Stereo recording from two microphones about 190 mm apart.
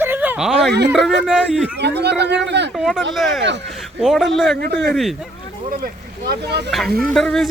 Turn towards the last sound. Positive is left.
turn(degrees=0)  # may be behind; listen again after turning